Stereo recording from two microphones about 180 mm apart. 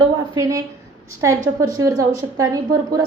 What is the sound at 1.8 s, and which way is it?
A woman's voice, 15° right (ahead or behind).